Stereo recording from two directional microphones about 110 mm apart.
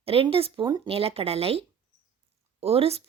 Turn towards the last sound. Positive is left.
turn(degrees=-65)  # may be behind; listen again after turning